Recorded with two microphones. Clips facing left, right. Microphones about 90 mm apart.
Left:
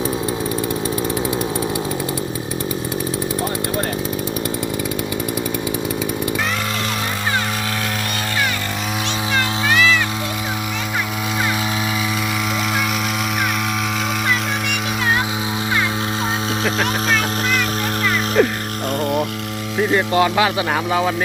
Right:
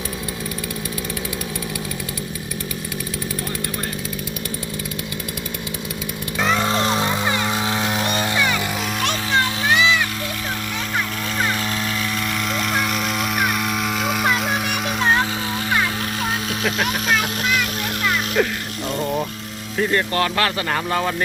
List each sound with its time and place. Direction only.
9.3 s music: 20° right (ahead or behind)
18.4 s music: centre (ahead or behind)
19.9 s speech: 10° left (ahead or behind)